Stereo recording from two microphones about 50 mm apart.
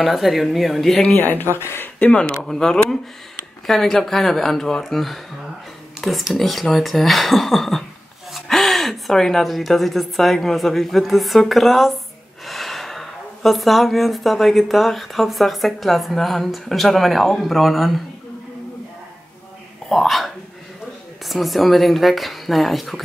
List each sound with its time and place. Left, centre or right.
0.0 s speech: centre
1.1 s speech: left
2.1 s speech: centre
2.4 s speech: centre
19.9 s speech: centre
21.3 s speech: centre